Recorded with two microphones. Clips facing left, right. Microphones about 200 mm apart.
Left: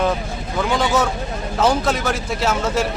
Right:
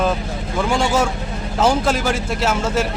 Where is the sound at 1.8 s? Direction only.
5° right (ahead or behind).